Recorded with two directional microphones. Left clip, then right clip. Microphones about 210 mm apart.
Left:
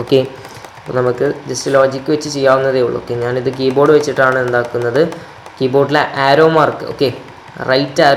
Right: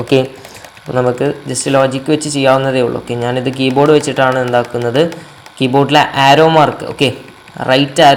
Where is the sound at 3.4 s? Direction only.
65° right (ahead or behind).